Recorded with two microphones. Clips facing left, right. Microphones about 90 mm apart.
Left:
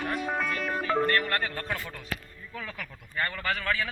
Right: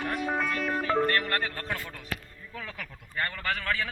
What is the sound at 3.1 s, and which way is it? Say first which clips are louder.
Speech: left 1 dB; centre (ahead or behind).